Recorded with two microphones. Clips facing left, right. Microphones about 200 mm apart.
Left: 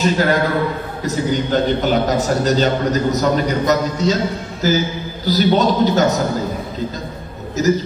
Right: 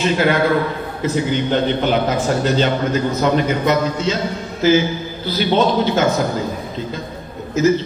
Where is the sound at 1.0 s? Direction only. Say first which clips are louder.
Right 1 dB; 40° left (ahead or behind).